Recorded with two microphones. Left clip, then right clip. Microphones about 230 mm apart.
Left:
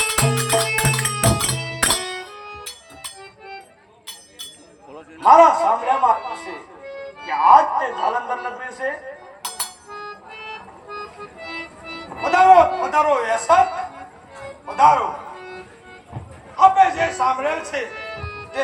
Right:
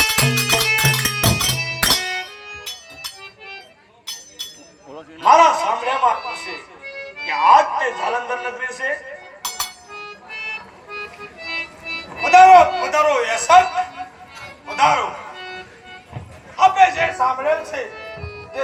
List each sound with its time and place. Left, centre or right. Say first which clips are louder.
0.0 s music: right 3 dB; left
5.2 s music: left 1 dB; left